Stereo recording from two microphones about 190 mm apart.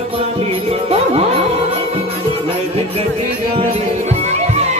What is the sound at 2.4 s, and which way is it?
Music, 30° right (ahead or behind).